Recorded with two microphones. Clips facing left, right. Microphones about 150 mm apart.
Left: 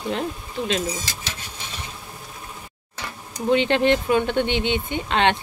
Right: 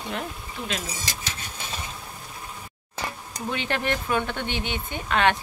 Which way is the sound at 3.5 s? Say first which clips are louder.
Left 10 dB; 20° left (ahead or behind).